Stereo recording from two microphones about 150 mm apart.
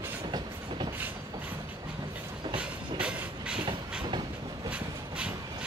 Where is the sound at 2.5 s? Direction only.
5° right (ahead or behind).